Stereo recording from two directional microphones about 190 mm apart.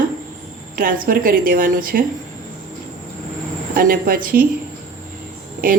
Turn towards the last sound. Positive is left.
turn(degrees=-45)  # may be behind; listen again after turning